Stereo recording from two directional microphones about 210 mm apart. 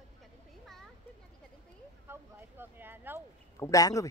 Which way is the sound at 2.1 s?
10° right (ahead or behind).